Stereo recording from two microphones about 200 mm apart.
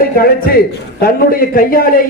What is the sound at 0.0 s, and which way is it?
A man's voice, 50° left (ahead or behind).